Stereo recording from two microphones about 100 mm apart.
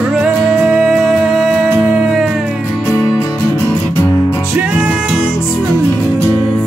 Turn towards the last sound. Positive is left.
turn(degrees=-10)  # may be behind; listen again after turning